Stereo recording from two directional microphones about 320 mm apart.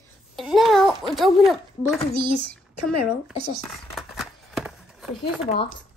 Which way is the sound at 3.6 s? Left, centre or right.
Centre.